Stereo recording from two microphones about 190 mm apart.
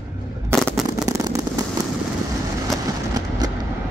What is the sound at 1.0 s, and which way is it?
Fireworks, 20° right (ahead or behind).